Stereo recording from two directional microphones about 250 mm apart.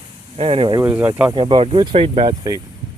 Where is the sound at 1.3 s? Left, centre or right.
Right.